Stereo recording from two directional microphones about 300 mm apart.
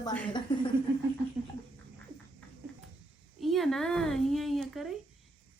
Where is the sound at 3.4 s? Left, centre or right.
Centre.